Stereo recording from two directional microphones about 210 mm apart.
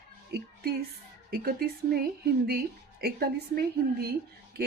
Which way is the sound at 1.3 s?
45° right (ahead or behind).